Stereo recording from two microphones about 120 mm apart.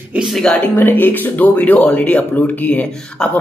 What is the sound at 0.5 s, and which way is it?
Speech, 15° left (ahead or behind).